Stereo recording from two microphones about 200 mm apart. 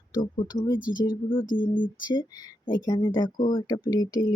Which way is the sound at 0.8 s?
45° left (ahead or behind).